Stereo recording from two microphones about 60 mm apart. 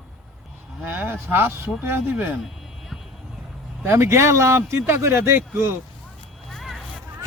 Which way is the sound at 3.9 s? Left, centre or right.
Right.